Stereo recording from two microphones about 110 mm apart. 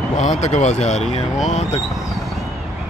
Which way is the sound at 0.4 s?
90° left.